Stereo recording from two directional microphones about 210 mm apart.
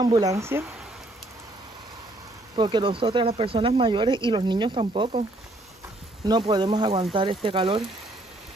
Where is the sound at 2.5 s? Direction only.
20° right (ahead or behind).